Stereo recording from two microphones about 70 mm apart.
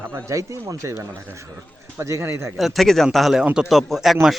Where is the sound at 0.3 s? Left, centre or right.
Right.